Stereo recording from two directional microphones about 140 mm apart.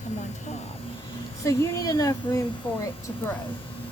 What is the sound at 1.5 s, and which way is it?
Speech, 25° left (ahead or behind).